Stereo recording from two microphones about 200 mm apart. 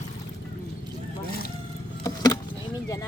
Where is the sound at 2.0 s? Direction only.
15° left (ahead or behind).